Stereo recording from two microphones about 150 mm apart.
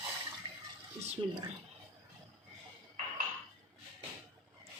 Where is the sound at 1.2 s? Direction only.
35° right (ahead or behind).